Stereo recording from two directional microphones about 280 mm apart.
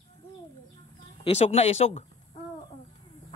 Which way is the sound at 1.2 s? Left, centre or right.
Left.